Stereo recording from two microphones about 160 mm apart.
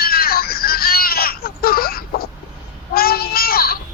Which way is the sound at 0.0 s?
70° left (ahead or behind).